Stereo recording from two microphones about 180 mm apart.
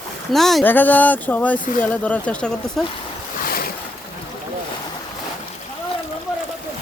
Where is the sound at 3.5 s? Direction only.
55° left (ahead or behind).